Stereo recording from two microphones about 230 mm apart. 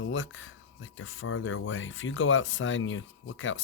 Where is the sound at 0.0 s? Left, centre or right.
Left.